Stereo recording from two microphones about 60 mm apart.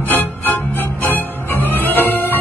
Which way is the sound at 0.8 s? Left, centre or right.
Left.